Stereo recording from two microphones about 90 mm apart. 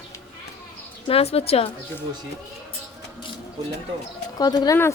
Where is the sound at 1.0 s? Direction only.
90° left.